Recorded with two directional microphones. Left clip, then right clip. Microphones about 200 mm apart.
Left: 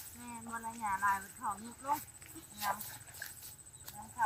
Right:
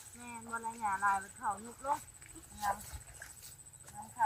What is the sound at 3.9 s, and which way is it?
Clip-clop, 35° left (ahead or behind).